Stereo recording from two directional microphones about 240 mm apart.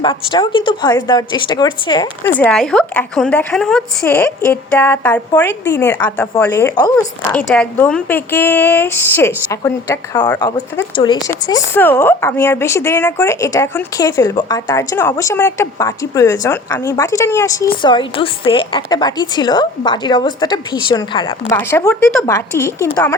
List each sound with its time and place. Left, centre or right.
0.0 s speech: centre
2.4 s a woman's voice: centre